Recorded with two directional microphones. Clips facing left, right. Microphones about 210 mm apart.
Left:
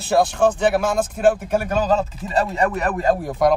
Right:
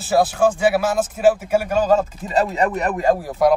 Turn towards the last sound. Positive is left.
turn(degrees=-15)  # may be behind; listen again after turning